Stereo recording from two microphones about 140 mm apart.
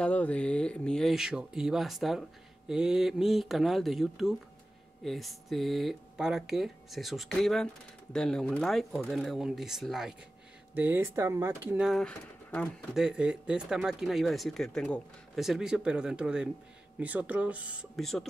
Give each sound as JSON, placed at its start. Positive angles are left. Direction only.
{"t": 0.0, "sound": "speech", "side_deg": 10}
{"t": 11.8, "sound": "speech", "side_deg": 0}
{"t": 12.9, "sound": "speech", "side_deg": -5}